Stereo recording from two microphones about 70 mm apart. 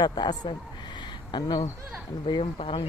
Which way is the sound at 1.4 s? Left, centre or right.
Left.